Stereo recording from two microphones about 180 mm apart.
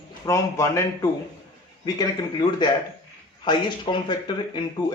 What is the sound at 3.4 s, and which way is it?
Speech, 25° left (ahead or behind).